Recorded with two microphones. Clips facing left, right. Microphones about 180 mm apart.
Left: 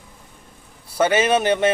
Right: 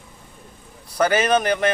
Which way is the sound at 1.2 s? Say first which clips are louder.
Left 1 dB; 5° left (ahead or behind).